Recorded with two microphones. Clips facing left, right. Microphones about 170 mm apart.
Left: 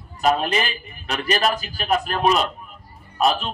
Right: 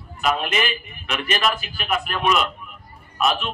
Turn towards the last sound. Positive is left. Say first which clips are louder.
# left 2 dB
turn(degrees=35)  # may be behind; listen again after turning